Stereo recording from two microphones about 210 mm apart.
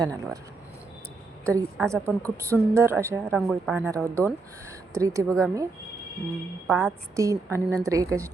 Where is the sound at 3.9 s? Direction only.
5° left (ahead or behind).